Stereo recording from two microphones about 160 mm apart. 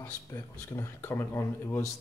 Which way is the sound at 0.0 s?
15° left (ahead or behind).